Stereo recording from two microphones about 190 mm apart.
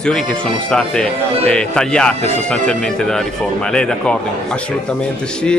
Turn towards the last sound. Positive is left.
turn(degrees=5)  # may be behind; listen again after turning